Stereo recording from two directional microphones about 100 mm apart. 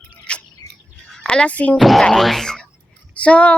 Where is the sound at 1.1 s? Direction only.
5° left (ahead or behind).